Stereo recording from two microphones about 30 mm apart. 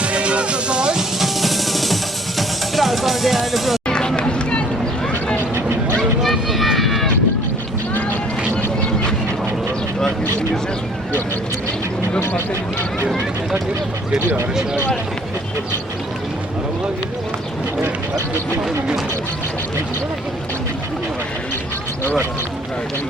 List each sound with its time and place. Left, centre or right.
0.0 s music: right
0.9 s music: centre
3.8 s run: left
6.2 s run: centre
14.1 s a sound: right